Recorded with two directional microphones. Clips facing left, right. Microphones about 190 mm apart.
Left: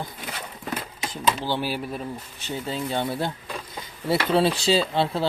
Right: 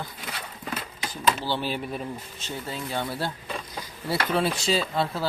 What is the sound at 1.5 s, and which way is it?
Speech, 10° left (ahead or behind).